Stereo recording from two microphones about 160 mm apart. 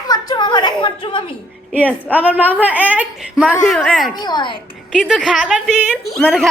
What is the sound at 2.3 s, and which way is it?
Speech, 10° right (ahead or behind).